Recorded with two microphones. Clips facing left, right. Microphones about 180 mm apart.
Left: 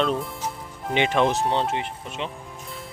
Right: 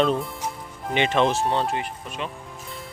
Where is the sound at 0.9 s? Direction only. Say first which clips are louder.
Even; 15° left (ahead or behind).